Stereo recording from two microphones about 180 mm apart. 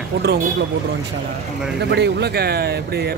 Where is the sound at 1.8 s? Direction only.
70° right (ahead or behind).